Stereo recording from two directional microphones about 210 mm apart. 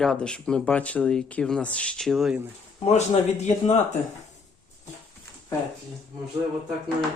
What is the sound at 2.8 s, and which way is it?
Speech, 30° left (ahead or behind).